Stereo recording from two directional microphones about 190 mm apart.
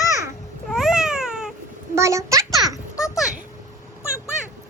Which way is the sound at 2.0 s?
15° right (ahead or behind).